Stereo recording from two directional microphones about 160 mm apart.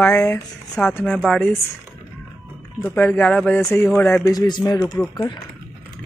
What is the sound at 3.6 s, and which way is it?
Speech, 15° left (ahead or behind).